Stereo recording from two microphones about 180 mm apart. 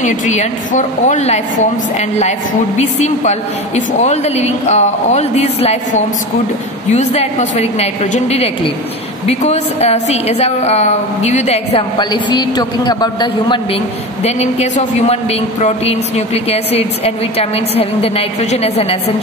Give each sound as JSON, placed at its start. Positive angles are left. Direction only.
{"t": 0.0, "sound": "speech", "side_deg": 40}
{"t": 14.2, "sound": "speech", "side_deg": 35}